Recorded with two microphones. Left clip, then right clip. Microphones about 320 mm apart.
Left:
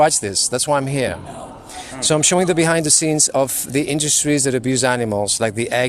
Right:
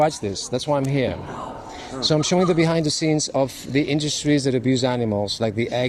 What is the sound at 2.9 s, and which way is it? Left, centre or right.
Speech, left.